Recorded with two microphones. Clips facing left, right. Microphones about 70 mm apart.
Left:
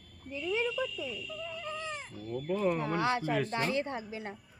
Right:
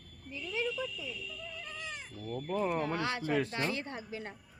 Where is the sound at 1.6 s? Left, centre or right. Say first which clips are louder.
Left 5 dB; left.